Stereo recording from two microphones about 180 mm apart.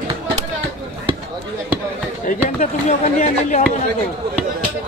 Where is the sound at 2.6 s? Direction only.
40° left (ahead or behind).